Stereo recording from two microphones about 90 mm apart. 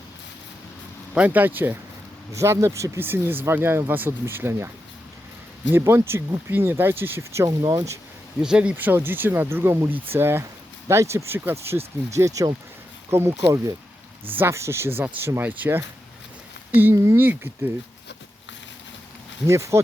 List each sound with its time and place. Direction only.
1.1 s speech: 15° right (ahead or behind)
2.3 s speech: 35° right (ahead or behind)
5.7 s speech: 30° right (ahead or behind)
8.4 s speech: 10° right (ahead or behind)
8.7 s speech: 25° right (ahead or behind)
12.1 s speech: 40° right (ahead or behind)
13.1 s speech: 25° right (ahead or behind)
13.4 s speech: 40° right (ahead or behind)
14.3 s speech: 25° right (ahead or behind)
16.8 s speech: 30° right (ahead or behind)
19.5 s speech: 35° right (ahead or behind)